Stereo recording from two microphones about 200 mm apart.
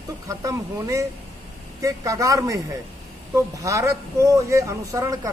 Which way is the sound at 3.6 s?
15° right (ahead or behind).